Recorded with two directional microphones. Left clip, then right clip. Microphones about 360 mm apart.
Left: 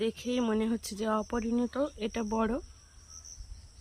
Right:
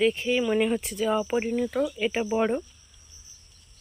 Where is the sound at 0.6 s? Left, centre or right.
Centre.